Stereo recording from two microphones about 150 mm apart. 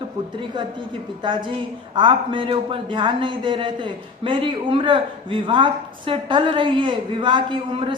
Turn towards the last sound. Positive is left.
turn(degrees=-35)  # may be behind; listen again after turning